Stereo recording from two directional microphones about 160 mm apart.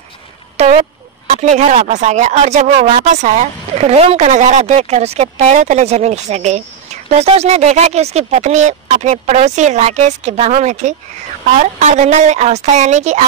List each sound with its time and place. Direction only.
0.6 s speech: 40° right (ahead or behind)